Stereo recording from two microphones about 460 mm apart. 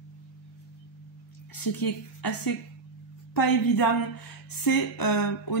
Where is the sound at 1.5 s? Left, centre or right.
Left.